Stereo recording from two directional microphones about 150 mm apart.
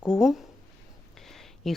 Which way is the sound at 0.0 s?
5° right (ahead or behind).